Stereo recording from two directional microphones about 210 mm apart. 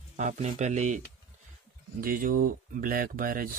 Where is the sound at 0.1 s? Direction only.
35° right (ahead or behind).